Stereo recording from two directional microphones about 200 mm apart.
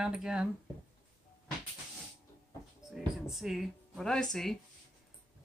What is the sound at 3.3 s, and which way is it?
Speech, centre (ahead or behind).